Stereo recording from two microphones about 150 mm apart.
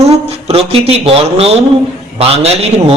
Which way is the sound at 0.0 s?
45° right (ahead or behind).